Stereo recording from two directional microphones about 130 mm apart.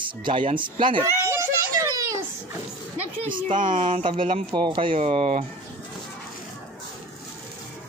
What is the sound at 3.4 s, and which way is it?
Speech, 80° right.